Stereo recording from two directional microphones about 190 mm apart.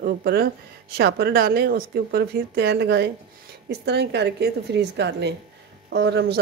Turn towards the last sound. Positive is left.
turn(degrees=-65)  # may be behind; listen again after turning